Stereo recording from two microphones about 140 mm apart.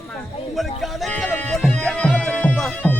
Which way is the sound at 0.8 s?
Centre (ahead or behind).